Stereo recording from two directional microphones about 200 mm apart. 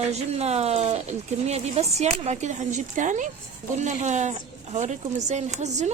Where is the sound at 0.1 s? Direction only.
30° right (ahead or behind).